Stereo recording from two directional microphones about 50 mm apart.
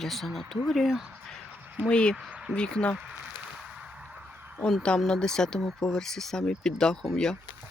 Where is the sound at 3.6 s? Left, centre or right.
Centre.